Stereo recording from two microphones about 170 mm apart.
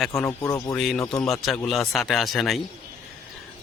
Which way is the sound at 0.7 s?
Centre (ahead or behind).